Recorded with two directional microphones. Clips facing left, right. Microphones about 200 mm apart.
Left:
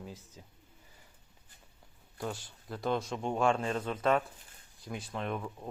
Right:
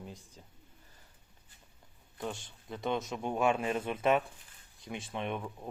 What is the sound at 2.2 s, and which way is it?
Speech, centre (ahead or behind).